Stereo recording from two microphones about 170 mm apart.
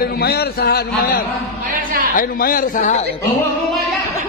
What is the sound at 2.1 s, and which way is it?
Speech, 55° left (ahead or behind).